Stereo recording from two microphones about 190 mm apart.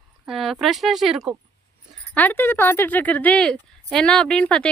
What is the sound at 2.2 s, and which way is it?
A woman's voice, 10° left (ahead or behind).